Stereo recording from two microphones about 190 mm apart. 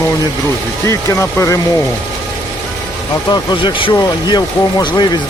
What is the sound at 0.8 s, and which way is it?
Speech, 15° left (ahead or behind).